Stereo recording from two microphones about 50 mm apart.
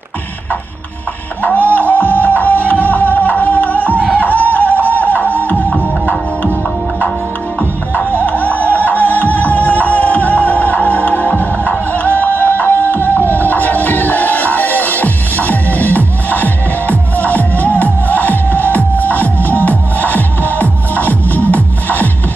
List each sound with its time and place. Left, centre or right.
1.8 s music: left
4.1 s a sound: left
7.9 s music: left